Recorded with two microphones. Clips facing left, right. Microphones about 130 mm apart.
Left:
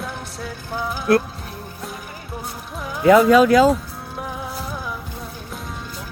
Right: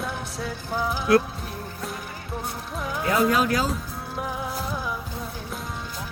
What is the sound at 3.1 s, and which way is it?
Speech, 90° left.